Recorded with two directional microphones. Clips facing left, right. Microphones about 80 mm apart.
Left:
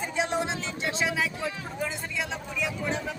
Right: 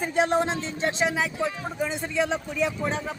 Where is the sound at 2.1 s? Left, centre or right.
Right.